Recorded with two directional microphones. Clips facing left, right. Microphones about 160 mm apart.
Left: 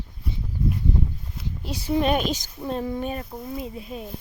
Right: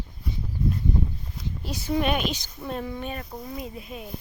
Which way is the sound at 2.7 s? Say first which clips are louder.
Left 4 dB; 30° left (ahead or behind).